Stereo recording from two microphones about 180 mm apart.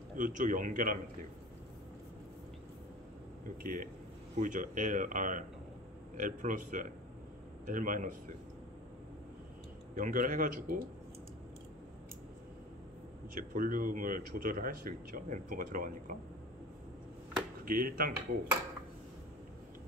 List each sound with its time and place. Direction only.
0.2 s speech: 45° right (ahead or behind)
3.6 s speech: 50° right (ahead or behind)
9.9 s speech: 50° right (ahead or behind)
13.3 s speech: 50° right (ahead or behind)
17.6 s speech: 55° right (ahead or behind)